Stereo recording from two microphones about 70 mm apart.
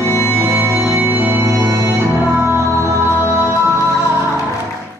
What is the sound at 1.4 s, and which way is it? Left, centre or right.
Music, right.